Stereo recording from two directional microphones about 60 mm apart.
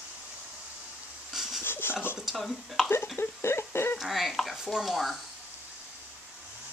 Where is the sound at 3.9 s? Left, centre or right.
Centre.